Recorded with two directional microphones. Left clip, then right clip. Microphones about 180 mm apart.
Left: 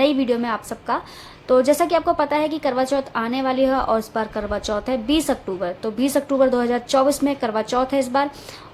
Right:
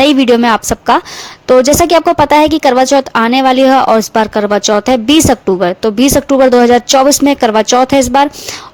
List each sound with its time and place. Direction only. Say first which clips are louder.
0.0 s a woman's voice: right 12 dB; 55° right (ahead or behind)